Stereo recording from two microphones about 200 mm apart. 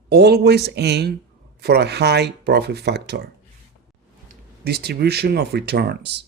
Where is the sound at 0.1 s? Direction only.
55° right (ahead or behind).